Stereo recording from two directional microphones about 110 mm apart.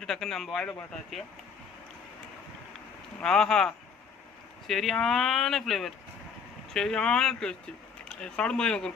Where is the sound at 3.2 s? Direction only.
5° left (ahead or behind).